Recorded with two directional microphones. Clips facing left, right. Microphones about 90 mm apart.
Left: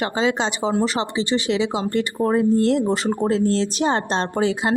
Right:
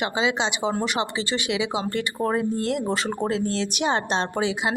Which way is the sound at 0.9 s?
30° left (ahead or behind).